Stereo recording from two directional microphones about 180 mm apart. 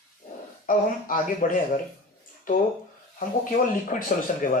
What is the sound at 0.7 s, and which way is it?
Speech, 50° left (ahead or behind).